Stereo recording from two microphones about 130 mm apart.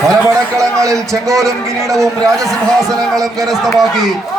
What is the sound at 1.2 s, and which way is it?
A man's voice, 25° right (ahead or behind).